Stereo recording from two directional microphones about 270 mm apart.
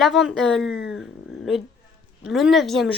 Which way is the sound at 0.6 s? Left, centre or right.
Left.